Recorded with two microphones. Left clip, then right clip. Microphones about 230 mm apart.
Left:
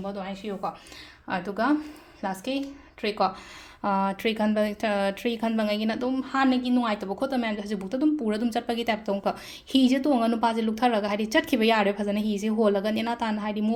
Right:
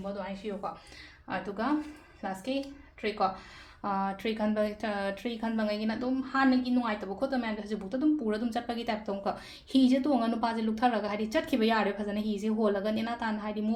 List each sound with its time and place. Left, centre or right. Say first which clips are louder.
0.2 s speech: left 4 dB; left